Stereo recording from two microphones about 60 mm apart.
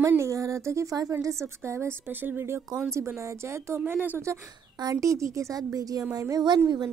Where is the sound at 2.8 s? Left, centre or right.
Right.